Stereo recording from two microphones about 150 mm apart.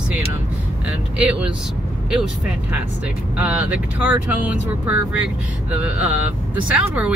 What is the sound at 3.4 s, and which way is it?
Speech, 10° right (ahead or behind).